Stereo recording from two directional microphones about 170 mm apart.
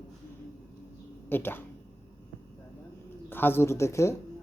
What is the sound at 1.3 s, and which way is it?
Speech, 10° left (ahead or behind).